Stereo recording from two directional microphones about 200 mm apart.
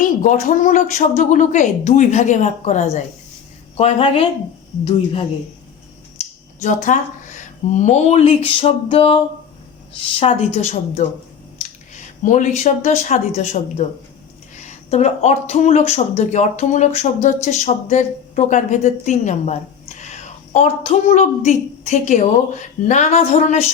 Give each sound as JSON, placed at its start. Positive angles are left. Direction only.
{"t": 0.2, "sound": "speech", "side_deg": 40}
{"t": 6.6, "sound": "speech", "side_deg": 40}
{"t": 10.2, "sound": "a woman's voice", "side_deg": 30}